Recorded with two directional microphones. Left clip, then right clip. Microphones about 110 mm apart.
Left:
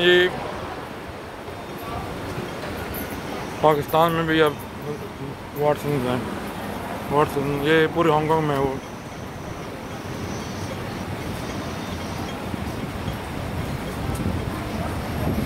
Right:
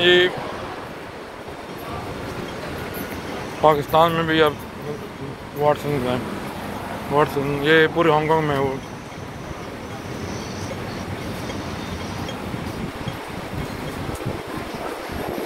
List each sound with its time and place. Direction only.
0.0 s speech: 35° left (ahead or behind)
3.6 s speech: 30° left (ahead or behind)
5.6 s speech: 30° left (ahead or behind)
7.2 s speech: 5° left (ahead or behind)